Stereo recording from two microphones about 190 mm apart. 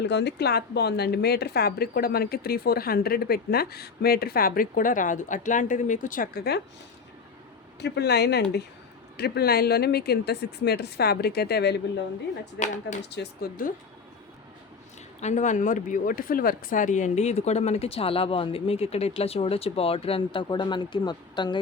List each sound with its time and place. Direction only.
0.0 s a woman's voice: 65° left (ahead or behind)
7.8 s speech: 60° left (ahead or behind)
12.5 s speech: 40° left (ahead or behind)
13.1 s speech: 65° left (ahead or behind)
15.2 s speech: 40° left (ahead or behind); by 21.6 s 25° left (ahead or behind)